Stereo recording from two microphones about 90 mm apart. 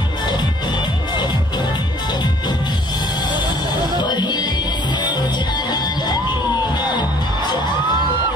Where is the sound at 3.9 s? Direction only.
55° left (ahead or behind).